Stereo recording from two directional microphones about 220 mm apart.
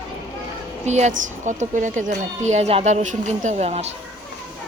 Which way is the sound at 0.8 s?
30° right (ahead or behind).